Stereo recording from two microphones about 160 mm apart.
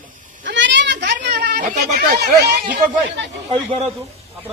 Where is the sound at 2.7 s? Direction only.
90° right.